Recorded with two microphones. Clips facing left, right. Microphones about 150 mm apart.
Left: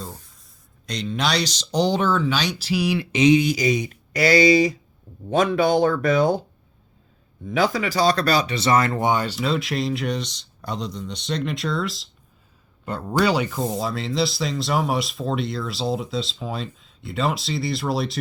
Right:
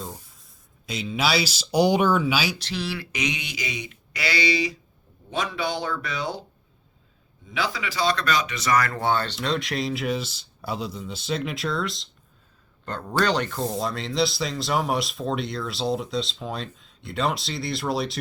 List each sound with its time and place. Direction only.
0.0 s speech: centre (ahead or behind)
2.6 s speech: 10° left (ahead or behind); by 6.4 s 50° left (ahead or behind)
7.5 s speech: 45° left (ahead or behind); by 12.0 s centre (ahead or behind)
13.1 s speech: 10° left (ahead or behind)